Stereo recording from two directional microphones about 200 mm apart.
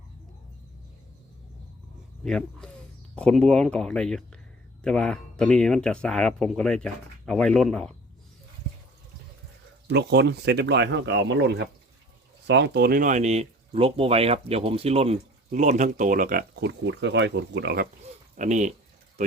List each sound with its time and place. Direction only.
2.2 s speech: 5° left (ahead or behind)
9.9 s speech: 55° right (ahead or behind)
18.3 s speech: 35° right (ahead or behind)